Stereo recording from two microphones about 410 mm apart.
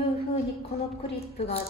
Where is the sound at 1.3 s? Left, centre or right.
Centre.